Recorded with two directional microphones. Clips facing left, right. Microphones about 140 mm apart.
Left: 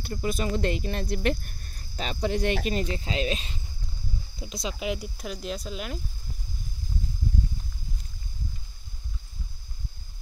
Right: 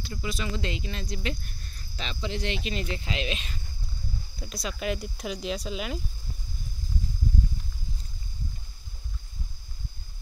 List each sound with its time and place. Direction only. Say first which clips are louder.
0.0 s speech: left 5 dB; 45° left (ahead or behind); by 5.9 s centre (ahead or behind)